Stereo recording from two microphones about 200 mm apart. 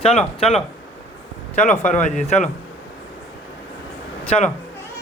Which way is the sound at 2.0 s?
35° left (ahead or behind).